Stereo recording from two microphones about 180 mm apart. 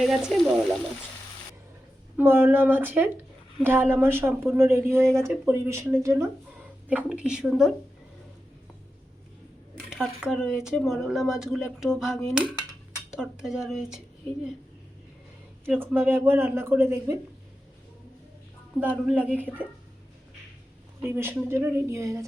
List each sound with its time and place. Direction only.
0.0 s speech: centre (ahead or behind)
2.1 s speech: 10° right (ahead or behind)
9.7 s speech: centre (ahead or behind)
15.6 s speech: 5° right (ahead or behind)
18.8 s speech: 10° right (ahead or behind)
21.1 s speech: 15° right (ahead or behind)